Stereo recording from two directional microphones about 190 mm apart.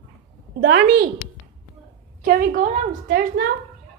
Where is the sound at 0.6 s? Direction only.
70° right (ahead or behind).